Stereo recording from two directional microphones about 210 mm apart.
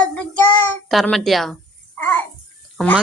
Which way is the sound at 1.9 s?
10° left (ahead or behind).